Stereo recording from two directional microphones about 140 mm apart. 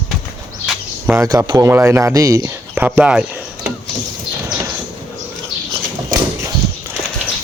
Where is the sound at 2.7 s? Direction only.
15° right (ahead or behind).